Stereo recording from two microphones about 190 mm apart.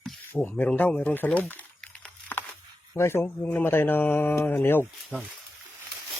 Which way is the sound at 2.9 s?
15° left (ahead or behind).